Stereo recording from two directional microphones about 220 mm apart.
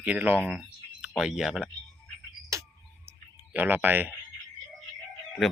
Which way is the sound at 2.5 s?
15° right (ahead or behind).